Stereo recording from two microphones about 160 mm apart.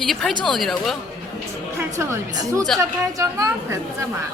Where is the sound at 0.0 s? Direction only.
Centre (ahead or behind).